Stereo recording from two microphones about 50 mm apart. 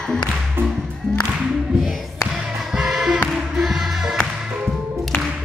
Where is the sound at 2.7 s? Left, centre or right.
Centre.